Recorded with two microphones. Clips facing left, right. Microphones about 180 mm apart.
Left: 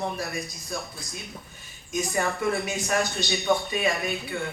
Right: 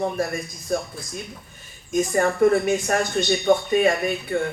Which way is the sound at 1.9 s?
50° right (ahead or behind).